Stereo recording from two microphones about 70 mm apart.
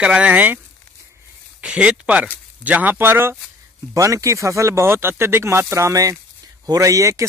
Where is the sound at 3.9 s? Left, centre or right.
Right.